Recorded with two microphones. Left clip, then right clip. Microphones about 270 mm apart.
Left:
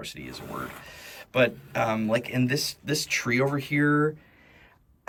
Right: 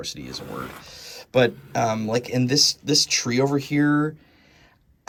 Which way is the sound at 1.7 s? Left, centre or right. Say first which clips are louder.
Right 2 dB; centre.